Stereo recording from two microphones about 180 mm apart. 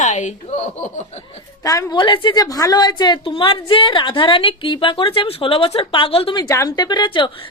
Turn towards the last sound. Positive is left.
turn(degrees=25)  # may be behind; listen again after turning